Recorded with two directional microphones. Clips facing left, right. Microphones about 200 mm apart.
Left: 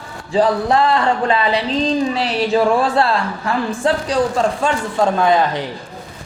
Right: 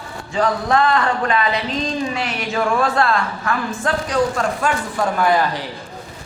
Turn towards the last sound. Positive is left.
turn(degrees=20)  # may be behind; listen again after turning